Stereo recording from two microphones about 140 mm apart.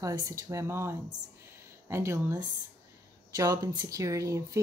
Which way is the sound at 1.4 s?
20° right (ahead or behind).